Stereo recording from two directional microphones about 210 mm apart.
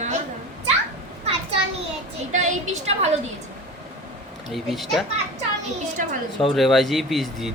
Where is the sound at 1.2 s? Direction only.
30° right (ahead or behind).